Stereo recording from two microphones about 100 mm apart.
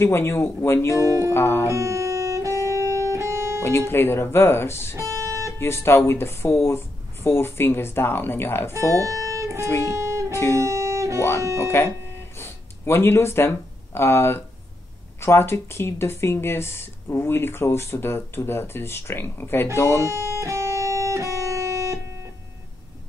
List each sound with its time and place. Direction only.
0.0 s speech: 25° left (ahead or behind)
1.7 s music: 30° right (ahead or behind)
3.6 s speech: 25° left (ahead or behind)
4.9 s music: 30° right (ahead or behind)
5.6 s speech: 25° left (ahead or behind)
8.9 s music: 35° right (ahead or behind)
9.8 s speech: 30° right (ahead or behind)
10.3 s music: 30° left (ahead or behind)
10.6 s music: 30° right (ahead or behind)
11.5 s speech: 25° left (ahead or behind)
20.1 s guitar: 30° right (ahead or behind)